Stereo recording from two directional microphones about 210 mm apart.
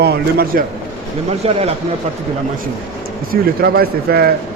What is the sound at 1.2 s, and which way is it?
Speech, 30° right (ahead or behind).